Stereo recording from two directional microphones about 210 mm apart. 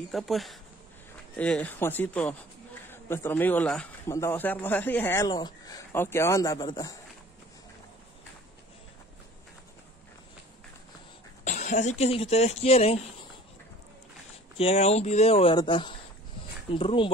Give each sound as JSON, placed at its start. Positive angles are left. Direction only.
{"t": 0.1, "sound": "a man's voice", "side_deg": 0}
{"t": 11.4, "sound": "speech", "side_deg": 35}
{"t": 14.6, "sound": "speech", "side_deg": 30}